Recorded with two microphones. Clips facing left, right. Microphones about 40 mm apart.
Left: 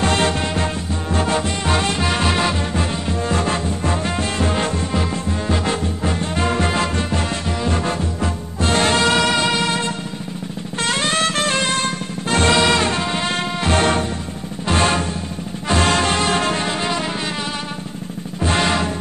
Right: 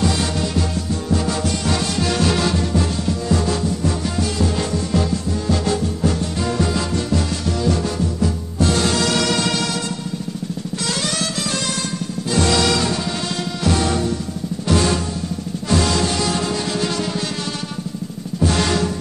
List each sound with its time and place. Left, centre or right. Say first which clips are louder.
0.0 s music: left 2 dB; left
18.4 s music: even; left